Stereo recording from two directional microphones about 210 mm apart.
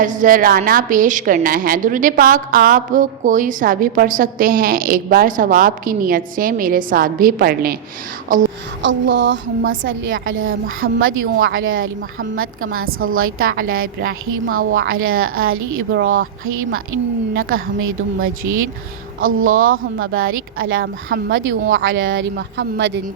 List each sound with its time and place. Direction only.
0.0 s a woman's voice: 40° right (ahead or behind)
8.8 s a woman's voice: 60° right (ahead or behind)
17.3 s a woman's voice: 75° right (ahead or behind); by 22.9 s 55° right (ahead or behind)